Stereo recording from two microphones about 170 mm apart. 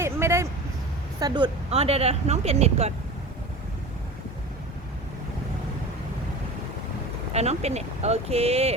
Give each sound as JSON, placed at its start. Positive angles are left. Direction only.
{"t": 0.0, "sound": "vehicle", "side_deg": -15}
{"t": 1.2, "sound": "speech", "side_deg": -25}
{"t": 1.7, "sound": "speech", "side_deg": -35}
{"t": 7.3, "sound": "speech", "side_deg": -40}